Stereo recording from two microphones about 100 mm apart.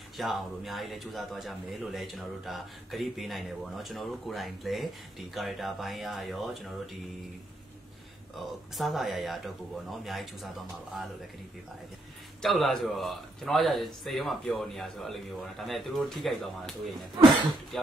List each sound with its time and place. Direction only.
0.2 s a man's voice: centre (ahead or behind)
8.4 s a man's voice: centre (ahead or behind)
12.4 s a man's voice: centre (ahead or behind)
17.2 s speech: 50° right (ahead or behind)